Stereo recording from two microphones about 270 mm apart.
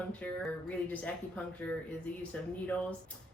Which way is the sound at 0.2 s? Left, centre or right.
Centre.